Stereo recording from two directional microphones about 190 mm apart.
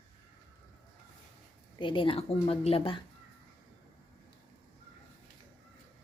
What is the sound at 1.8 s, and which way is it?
A woman's voice, 25° left (ahead or behind).